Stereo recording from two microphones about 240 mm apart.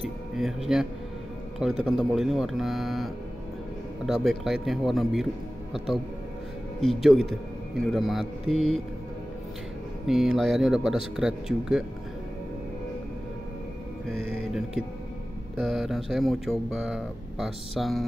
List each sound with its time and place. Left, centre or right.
0.0 s speech: centre
10.0 s speech: centre
14.0 s music: right
15.6 s speech: centre